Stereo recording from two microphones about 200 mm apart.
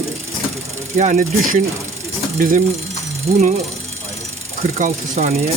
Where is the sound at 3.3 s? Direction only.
30° right (ahead or behind).